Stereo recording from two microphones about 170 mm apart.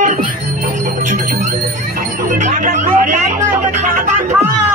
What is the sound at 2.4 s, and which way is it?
Music, 45° right (ahead or behind).